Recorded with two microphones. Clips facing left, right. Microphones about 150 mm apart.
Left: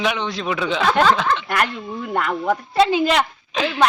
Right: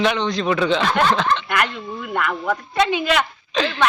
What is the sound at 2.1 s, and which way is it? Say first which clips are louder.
Speech: left 2 dB; 30° left (ahead or behind).